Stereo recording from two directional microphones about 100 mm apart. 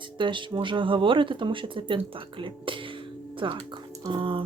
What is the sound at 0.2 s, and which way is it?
Speech, 55° right (ahead or behind).